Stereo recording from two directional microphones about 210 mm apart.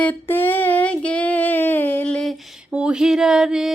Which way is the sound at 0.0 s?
10° left (ahead or behind).